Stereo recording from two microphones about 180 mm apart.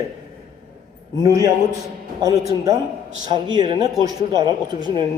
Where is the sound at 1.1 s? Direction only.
20° right (ahead or behind).